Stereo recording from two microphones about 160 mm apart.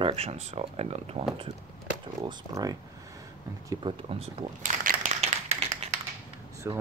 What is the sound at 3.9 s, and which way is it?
Speech, 30° right (ahead or behind).